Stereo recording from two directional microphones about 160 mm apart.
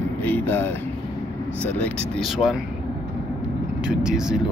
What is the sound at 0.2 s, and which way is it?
Speech, 10° left (ahead or behind).